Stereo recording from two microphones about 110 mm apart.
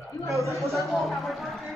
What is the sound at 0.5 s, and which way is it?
A man's voice, centre (ahead or behind).